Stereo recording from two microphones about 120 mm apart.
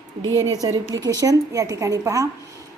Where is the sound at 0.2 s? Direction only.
30° right (ahead or behind).